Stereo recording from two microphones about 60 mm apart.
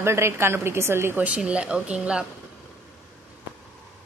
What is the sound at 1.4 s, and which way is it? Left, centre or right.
Speech, centre.